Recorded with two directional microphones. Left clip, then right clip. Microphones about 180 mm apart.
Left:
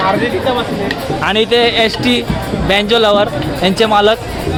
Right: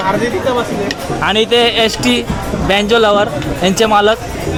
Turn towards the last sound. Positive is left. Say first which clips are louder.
# even
turn(degrees=-5)  # may be behind; listen again after turning